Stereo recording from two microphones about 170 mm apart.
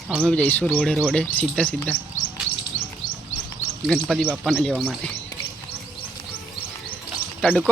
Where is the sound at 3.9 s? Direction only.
Centre (ahead or behind).